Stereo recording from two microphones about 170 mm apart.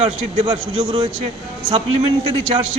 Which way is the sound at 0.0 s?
30° right (ahead or behind).